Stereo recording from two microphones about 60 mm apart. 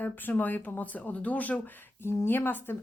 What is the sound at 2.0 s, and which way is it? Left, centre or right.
Speech, left.